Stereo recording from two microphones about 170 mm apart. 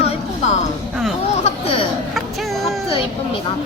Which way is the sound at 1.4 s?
35° left (ahead or behind).